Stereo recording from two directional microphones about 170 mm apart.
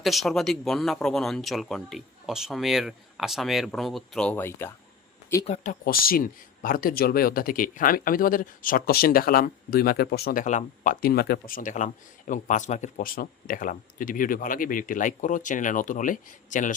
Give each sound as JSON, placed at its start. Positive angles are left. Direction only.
{"t": 0.0, "sound": "speech", "side_deg": 0}
{"t": 5.8, "sound": "speech", "side_deg": 60}
{"t": 10.4, "sound": "speech", "side_deg": 50}